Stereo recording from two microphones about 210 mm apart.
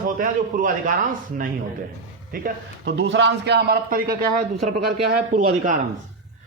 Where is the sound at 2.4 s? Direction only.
55° right (ahead or behind); by 5.8 s 35° right (ahead or behind).